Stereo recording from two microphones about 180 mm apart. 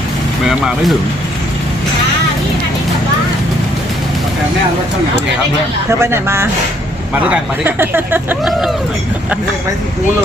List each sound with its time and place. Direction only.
0.4 s speech: centre (ahead or behind)
5.9 s speech: 15° right (ahead or behind)